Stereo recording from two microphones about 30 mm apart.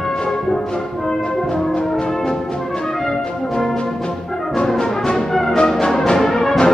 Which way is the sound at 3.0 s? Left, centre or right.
Centre.